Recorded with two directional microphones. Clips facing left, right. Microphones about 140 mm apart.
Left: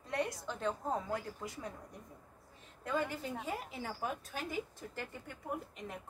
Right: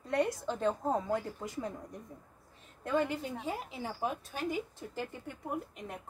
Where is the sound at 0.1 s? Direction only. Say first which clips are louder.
Right 6 dB; 50° right (ahead or behind).